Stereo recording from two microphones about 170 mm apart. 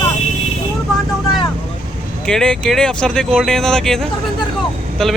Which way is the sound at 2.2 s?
5° left (ahead or behind).